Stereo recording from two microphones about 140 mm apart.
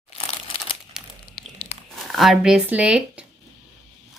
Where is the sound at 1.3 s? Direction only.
45° left (ahead or behind).